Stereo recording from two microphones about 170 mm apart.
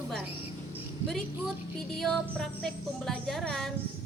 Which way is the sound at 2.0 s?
5° left (ahead or behind).